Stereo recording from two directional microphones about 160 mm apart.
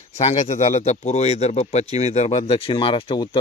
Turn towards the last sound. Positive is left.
turn(degrees=30)  # may be behind; listen again after turning